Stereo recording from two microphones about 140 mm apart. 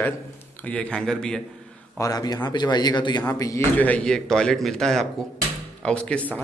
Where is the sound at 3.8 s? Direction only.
10° left (ahead or behind).